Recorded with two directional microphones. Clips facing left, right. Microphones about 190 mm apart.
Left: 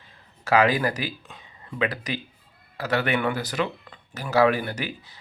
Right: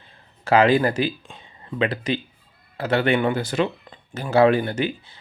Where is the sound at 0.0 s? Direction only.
30° right (ahead or behind).